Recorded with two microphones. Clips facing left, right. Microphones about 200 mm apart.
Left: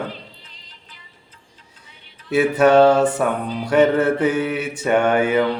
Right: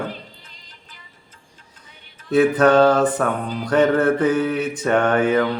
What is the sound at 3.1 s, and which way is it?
Mantra, 10° left (ahead or behind).